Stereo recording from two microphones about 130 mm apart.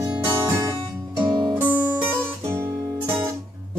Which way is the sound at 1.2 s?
35° right (ahead or behind).